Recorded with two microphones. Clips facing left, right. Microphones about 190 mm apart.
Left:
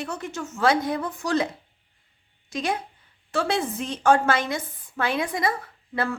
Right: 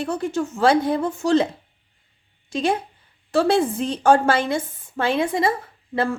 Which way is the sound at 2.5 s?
30° right (ahead or behind).